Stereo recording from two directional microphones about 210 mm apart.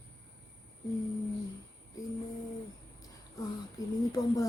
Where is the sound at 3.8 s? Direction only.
15° left (ahead or behind).